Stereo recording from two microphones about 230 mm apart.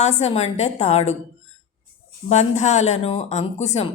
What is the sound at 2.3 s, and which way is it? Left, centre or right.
Speech, left.